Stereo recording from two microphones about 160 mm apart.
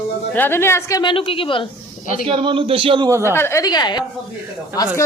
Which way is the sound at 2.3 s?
30° right (ahead or behind).